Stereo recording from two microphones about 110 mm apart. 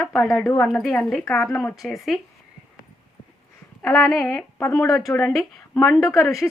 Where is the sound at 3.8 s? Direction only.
5° left (ahead or behind).